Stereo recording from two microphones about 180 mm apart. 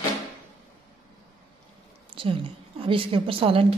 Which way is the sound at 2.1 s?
30° right (ahead or behind).